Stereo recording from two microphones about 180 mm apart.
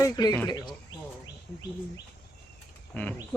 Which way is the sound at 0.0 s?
20° left (ahead or behind).